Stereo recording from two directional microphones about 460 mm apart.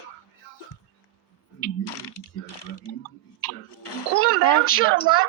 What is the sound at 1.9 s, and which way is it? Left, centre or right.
Mechanisms, left.